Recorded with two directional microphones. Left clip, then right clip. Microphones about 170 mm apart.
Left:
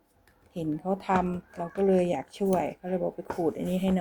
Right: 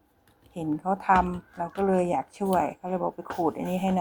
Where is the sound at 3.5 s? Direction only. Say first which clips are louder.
Right 1 dB; 25° left (ahead or behind).